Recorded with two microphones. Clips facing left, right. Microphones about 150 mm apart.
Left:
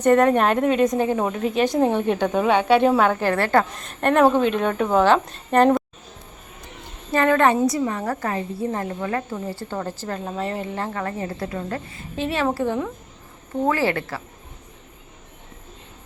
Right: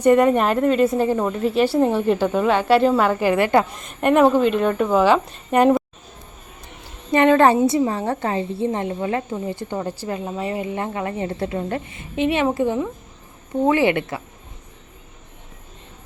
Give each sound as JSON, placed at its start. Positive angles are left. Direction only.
{"t": 0.0, "sound": "a woman's voice", "side_deg": -10}
{"t": 7.1, "sound": "a woman's voice", "side_deg": -20}